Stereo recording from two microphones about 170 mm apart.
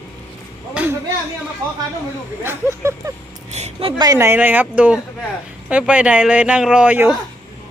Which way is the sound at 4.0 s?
20° right (ahead or behind).